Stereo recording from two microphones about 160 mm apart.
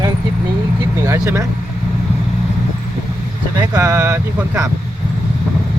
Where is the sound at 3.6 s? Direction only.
20° right (ahead or behind).